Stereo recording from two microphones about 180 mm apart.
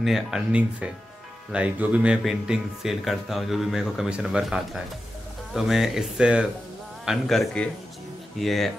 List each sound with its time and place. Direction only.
0.0 s speech: centre (ahead or behind)